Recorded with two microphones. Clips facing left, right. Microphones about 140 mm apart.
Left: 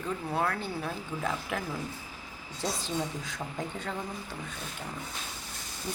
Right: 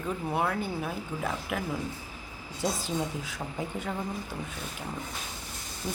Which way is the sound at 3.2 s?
10° right (ahead or behind).